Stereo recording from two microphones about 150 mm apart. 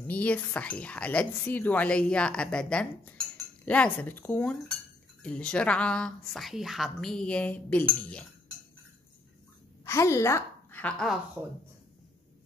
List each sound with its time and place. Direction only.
0.0 s speech: 10° left (ahead or behind)
9.8 s a woman's voice: 20° left (ahead or behind)